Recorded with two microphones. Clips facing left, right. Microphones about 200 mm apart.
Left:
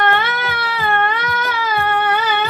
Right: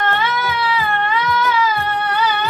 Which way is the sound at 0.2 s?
60° left (ahead or behind).